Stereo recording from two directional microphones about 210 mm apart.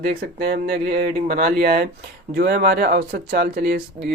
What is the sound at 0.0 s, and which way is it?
Speech, 45° right (ahead or behind).